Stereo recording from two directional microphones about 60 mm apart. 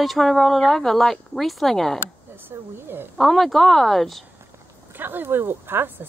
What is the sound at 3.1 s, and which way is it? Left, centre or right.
Speech, centre.